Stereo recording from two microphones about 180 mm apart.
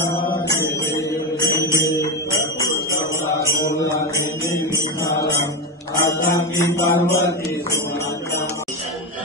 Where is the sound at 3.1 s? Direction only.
15° left (ahead or behind).